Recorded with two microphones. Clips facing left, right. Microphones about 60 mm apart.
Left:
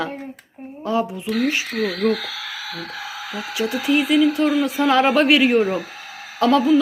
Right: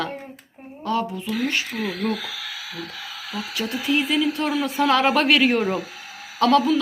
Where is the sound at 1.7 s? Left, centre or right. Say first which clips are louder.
Left 5 dB; left.